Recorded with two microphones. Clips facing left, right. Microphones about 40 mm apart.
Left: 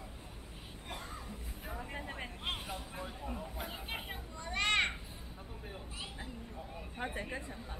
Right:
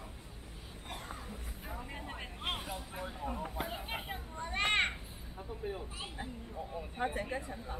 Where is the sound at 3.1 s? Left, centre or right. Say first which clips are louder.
Right 3 dB; centre.